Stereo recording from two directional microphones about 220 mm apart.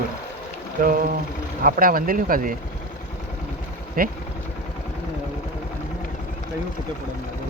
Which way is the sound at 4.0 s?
40° right (ahead or behind).